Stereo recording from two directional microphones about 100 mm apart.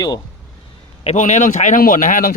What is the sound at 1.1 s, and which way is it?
Speech, 90° left.